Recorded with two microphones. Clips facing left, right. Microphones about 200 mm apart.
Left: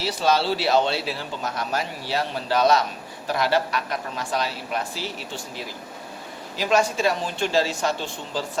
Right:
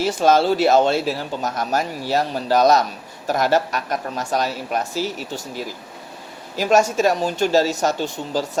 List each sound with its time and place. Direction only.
0.0 s a man's voice: 50° right (ahead or behind)